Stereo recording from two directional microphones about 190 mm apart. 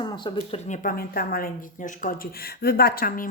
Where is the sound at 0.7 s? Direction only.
45° left (ahead or behind).